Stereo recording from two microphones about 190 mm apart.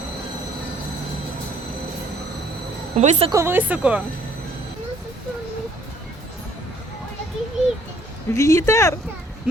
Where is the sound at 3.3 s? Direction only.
10° right (ahead or behind).